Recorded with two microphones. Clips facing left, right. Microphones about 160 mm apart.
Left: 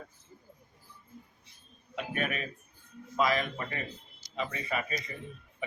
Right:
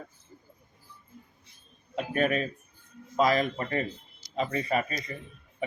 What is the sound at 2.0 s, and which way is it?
Speech, 35° right (ahead or behind).